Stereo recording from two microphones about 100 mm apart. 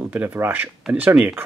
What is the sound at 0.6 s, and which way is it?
Speech, 5° right (ahead or behind).